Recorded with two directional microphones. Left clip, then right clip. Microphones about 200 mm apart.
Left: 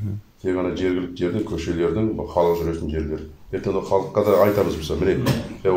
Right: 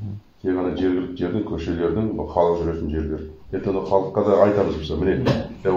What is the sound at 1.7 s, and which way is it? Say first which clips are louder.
Speech: left 3 dB; 20° left (ahead or behind).